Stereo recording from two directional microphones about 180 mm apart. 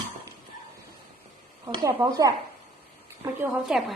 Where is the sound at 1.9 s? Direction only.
20° right (ahead or behind).